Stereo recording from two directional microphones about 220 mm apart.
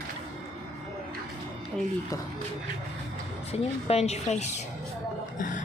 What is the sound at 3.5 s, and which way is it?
A woman's voice, 30° left (ahead or behind).